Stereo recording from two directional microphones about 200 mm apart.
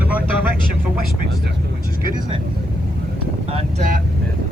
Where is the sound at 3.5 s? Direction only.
40° right (ahead or behind).